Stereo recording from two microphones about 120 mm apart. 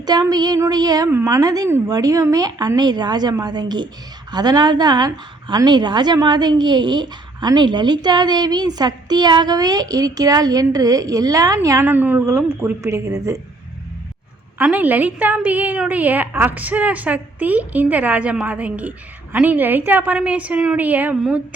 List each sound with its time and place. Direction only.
0.0 s a woman's voice: 35° right (ahead or behind)
11.9 s a woman's voice: 15° right (ahead or behind)
14.6 s a woman's voice: 15° right (ahead or behind)